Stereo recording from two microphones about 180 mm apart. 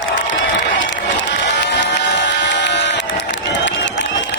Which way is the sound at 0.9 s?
80° left.